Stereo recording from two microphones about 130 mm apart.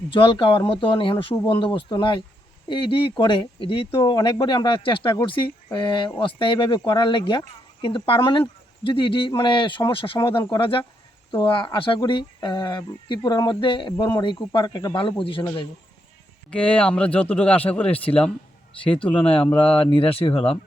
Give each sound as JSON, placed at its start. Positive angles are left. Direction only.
{"t": 0.1, "sound": "speech", "side_deg": 40}
{"t": 16.5, "sound": "speech", "side_deg": 10}
{"t": 19.9, "sound": "speech", "side_deg": 45}